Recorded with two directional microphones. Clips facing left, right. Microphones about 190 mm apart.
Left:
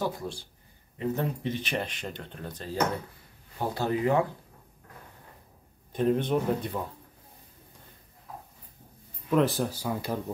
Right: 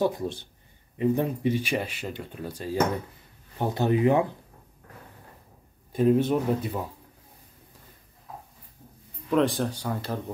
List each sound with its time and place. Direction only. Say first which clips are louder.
0.0 s speech: right 6 dB; 20° right (ahead or behind)
5.9 s speech: right 4 dB; 5° right (ahead or behind)
9.3 s speech: right 1 dB; centre (ahead or behind)